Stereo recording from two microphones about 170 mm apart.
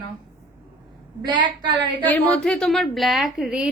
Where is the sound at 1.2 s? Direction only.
25° right (ahead or behind).